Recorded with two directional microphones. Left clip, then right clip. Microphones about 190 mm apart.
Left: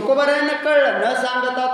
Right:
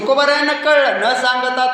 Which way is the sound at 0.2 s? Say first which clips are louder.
Right 3 dB; 10° left (ahead or behind).